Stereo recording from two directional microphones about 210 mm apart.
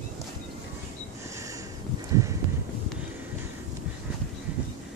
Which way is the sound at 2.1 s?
15° right (ahead or behind).